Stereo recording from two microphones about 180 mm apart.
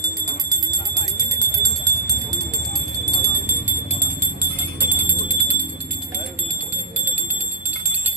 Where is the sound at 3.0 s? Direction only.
20° right (ahead or behind).